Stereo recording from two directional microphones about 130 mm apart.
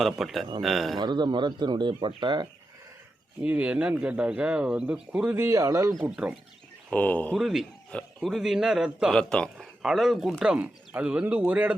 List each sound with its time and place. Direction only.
0.0 s a man's voice: centre (ahead or behind)
0.9 s speech: 35° right (ahead or behind)
3.4 s speech: 10° right (ahead or behind)
5.3 s speech: 20° right (ahead or behind)
6.0 s speech: 5° right (ahead or behind)
6.9 s speech: 10° left (ahead or behind)
7.3 s a man's voice: 5° right (ahead or behind)